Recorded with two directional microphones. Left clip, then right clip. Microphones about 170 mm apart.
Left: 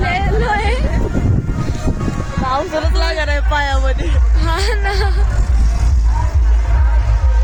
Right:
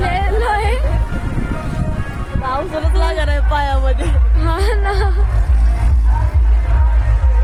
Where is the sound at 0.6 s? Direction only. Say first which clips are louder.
Even; centre (ahead or behind).